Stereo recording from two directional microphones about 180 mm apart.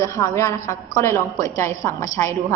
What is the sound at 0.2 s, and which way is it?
A woman's voice, 15° left (ahead or behind).